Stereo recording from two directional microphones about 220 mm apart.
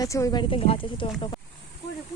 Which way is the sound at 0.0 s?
15° left (ahead or behind).